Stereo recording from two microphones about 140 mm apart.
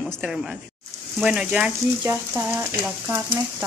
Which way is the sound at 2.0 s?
20° right (ahead or behind).